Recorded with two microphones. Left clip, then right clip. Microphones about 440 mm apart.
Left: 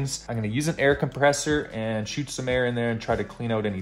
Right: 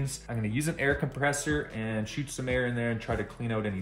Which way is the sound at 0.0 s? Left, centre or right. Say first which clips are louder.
Left 5 dB; centre.